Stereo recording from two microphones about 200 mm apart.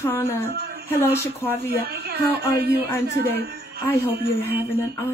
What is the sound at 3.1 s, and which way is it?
A man's voice, 50° right (ahead or behind).